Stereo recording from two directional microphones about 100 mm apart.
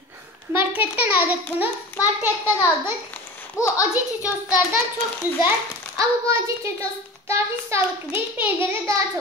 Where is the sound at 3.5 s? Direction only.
30° left (ahead or behind).